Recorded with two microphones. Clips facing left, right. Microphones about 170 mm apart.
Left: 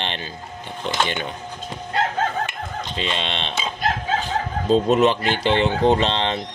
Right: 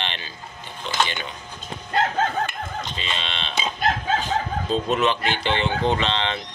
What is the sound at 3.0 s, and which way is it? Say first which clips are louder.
Speech: left 9 dB; 55° left (ahead or behind).